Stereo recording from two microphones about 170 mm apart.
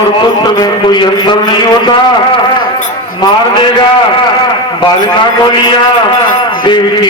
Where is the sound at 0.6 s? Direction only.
25° left (ahead or behind).